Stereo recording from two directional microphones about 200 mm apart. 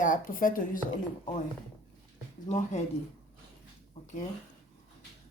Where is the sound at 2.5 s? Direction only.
35° left (ahead or behind).